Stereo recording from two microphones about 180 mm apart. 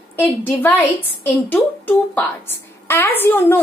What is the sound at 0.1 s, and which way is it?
A woman's voice, 10° left (ahead or behind).